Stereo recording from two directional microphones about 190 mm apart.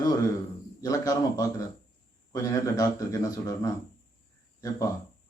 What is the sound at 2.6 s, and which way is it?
A man's voice, 20° left (ahead or behind).